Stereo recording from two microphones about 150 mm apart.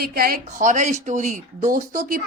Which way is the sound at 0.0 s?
85° right.